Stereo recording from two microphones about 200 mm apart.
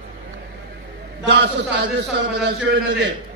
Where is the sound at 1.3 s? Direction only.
60° right (ahead or behind).